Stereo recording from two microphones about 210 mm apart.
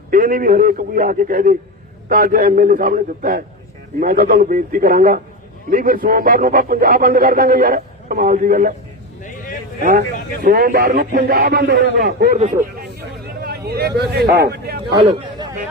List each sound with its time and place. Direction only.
0.1 s a man's voice: 40° right (ahead or behind)
9.8 s a man's voice: 45° right (ahead or behind)
13.4 s a man's voice: 50° right (ahead or behind)
14.9 s speech: 20° right (ahead or behind)